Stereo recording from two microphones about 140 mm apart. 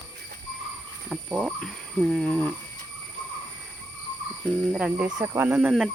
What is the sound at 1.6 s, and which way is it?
Speech, 5° left (ahead or behind).